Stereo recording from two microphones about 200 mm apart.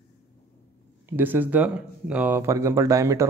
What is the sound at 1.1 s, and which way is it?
Speech, 10° right (ahead or behind).